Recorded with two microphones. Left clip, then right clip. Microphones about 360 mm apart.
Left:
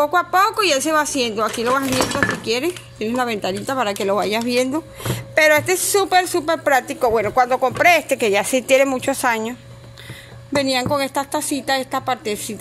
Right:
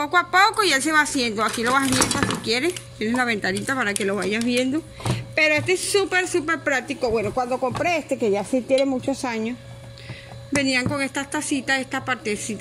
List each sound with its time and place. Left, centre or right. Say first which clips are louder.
0.0 s a woman's voice: left 2 dB; centre; by 8.0 s left
8.3 s speech: left 4 dB; left
8.6 s speech: left 4 dB; left
9.1 s speech: left 7 dB; centre
10.5 s a woman's voice: left 4 dB; centre